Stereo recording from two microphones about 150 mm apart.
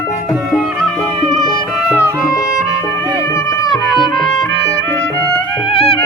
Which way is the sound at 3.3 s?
20° left (ahead or behind).